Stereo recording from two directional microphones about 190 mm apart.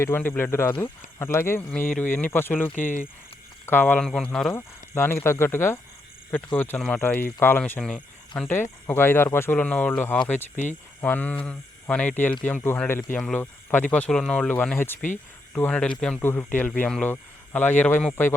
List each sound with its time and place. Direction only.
0.0 s speech: 10° left (ahead or behind)
2.8 s speech: 45° left (ahead or behind)
3.7 s speech: 10° left (ahead or behind)